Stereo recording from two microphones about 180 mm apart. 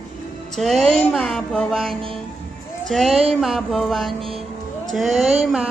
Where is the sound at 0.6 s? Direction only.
Centre (ahead or behind).